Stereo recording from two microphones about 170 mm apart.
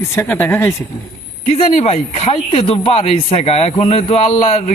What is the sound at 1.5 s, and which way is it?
A man's voice, 40° left (ahead or behind).